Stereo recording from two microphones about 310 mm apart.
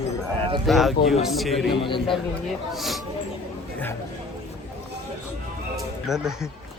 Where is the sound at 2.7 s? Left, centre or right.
Centre.